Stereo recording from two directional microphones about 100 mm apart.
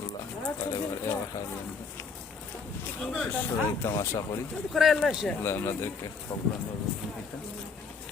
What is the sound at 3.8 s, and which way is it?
Speech, 30° left (ahead or behind).